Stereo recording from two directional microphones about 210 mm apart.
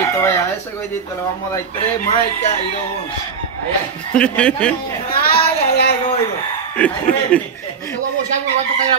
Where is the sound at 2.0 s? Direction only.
35° left (ahead or behind).